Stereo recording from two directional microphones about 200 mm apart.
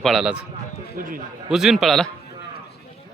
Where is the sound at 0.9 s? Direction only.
45° right (ahead or behind).